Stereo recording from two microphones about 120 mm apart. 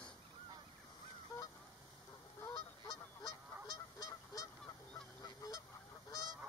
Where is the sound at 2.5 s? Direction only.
35° left (ahead or behind).